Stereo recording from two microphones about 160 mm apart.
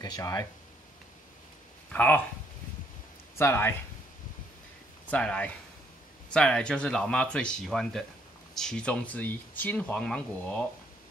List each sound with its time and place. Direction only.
0.0 s speech: 25° left (ahead or behind)
1.9 s speech: 10° left (ahead or behind)
3.3 s speech: 15° left (ahead or behind)
5.1 s speech: 10° left (ahead or behind)